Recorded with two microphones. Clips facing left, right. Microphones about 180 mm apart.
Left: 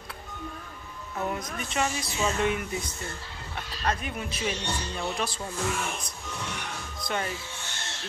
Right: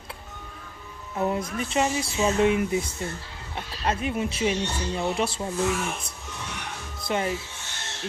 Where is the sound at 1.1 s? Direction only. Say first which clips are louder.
Right 5 dB; 25° right (ahead or behind).